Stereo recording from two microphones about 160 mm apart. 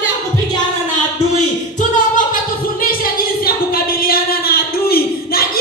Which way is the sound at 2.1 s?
60° left (ahead or behind).